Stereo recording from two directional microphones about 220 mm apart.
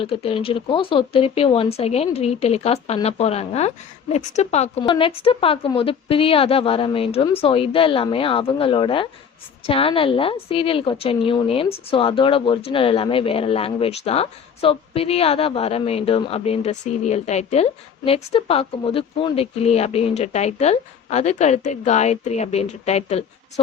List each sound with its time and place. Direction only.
0.0 s a woman's voice: 25° left (ahead or behind)